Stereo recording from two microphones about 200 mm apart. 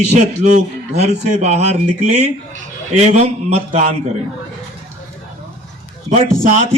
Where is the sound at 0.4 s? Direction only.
35° right (ahead or behind).